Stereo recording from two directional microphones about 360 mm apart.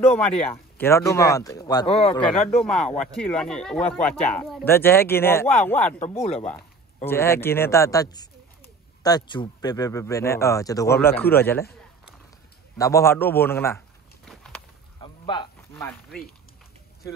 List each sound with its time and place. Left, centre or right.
0.7 s speech: centre
6.1 s speech: centre
7.1 s speech: centre
12.7 s a sound: centre
15.0 s a sound: centre
15.7 s chopping: centre